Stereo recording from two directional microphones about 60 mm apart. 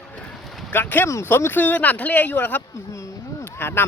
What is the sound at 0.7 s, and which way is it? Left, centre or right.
Speech, left.